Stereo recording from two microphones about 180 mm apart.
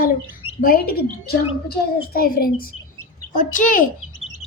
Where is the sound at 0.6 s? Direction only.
55° left (ahead or behind).